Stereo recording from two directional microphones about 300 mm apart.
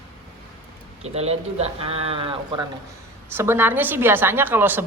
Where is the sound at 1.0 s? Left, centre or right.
Right.